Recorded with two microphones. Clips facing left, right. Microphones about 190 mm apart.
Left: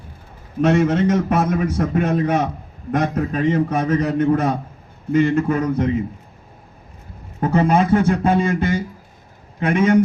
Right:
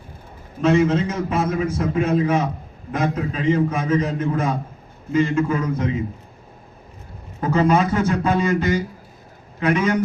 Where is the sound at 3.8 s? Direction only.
70° left (ahead or behind).